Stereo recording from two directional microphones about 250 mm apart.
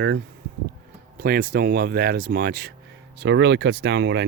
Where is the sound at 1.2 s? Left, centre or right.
Right.